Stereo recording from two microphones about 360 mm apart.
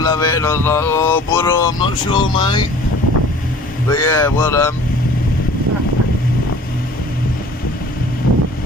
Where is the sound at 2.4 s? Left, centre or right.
Centre.